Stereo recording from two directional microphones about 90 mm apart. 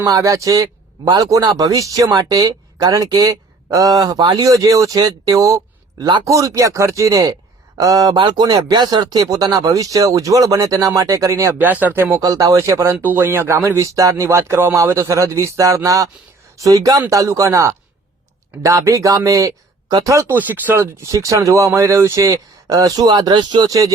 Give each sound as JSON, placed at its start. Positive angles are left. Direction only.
{"t": 0.0, "sound": "speech", "side_deg": -40}
{"t": 4.4, "sound": "speech", "side_deg": -40}
{"t": 11.6, "sound": "speech", "side_deg": -20}
{"t": 12.2, "sound": "speech", "side_deg": -40}
{"t": 12.9, "sound": "speech", "side_deg": -20}
{"t": 20.2, "sound": "speech", "side_deg": -20}
{"t": 23.0, "sound": "speech", "side_deg": -60}
{"t": 23.6, "sound": "speech", "side_deg": -40}